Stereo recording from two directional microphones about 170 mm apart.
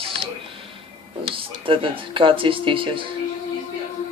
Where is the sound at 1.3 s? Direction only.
30° right (ahead or behind).